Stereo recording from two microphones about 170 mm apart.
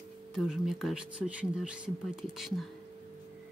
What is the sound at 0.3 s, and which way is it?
Speech, 5° right (ahead or behind).